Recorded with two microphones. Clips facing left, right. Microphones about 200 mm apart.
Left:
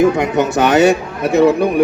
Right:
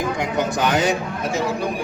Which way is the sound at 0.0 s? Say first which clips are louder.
Left 9 dB; 65° left (ahead or behind).